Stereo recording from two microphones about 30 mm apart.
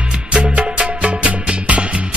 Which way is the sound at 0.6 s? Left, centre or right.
Right.